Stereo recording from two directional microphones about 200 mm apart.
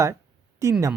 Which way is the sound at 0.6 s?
15° right (ahead or behind).